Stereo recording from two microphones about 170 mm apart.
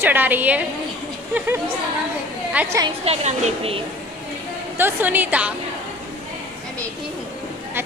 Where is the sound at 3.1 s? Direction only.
40° right (ahead or behind).